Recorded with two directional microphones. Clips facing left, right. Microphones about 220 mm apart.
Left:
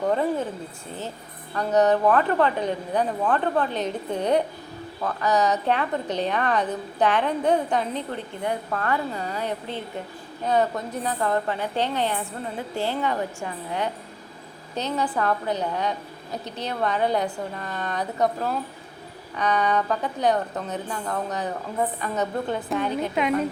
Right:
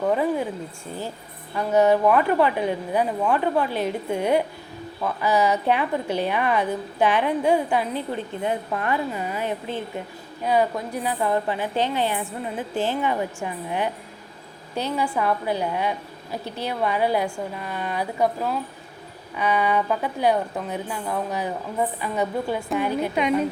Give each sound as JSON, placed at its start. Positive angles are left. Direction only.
{"t": 0.0, "sound": "a woman's voice", "side_deg": -5}
{"t": 1.5, "sound": "a woman's voice", "side_deg": -10}
{"t": 14.9, "sound": "a woman's voice", "side_deg": -10}